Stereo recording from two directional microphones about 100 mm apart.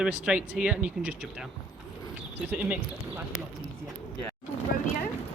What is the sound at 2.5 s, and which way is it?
Speech, 15° right (ahead or behind).